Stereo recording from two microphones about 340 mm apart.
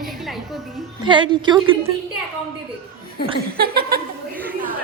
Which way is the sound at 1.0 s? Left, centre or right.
Centre.